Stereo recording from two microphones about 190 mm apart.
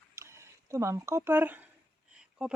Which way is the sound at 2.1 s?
5° right (ahead or behind).